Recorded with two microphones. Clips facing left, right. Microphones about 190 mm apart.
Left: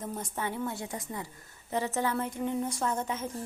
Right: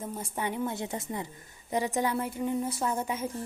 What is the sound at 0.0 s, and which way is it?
A woman's voice, 10° right (ahead or behind).